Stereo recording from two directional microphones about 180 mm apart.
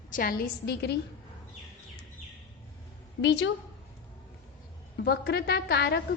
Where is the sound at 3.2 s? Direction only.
85° left.